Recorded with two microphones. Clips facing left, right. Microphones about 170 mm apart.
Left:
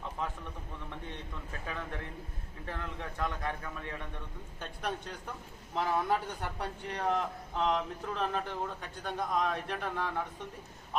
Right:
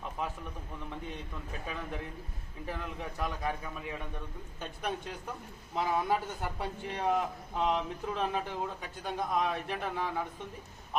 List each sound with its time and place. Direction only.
1.6 s a man's voice: 15° right (ahead or behind)